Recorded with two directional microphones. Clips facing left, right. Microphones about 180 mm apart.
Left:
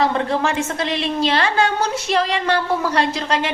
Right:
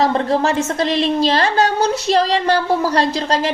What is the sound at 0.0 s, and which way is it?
A woman's voice, 40° right (ahead or behind).